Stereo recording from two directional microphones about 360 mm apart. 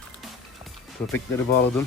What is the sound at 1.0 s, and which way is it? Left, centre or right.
Speech, centre.